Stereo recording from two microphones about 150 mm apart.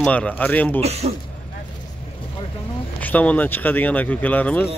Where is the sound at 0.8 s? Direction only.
45° right (ahead or behind).